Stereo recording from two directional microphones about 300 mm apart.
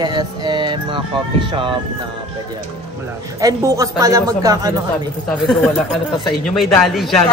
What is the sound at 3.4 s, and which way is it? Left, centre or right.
Speech, centre.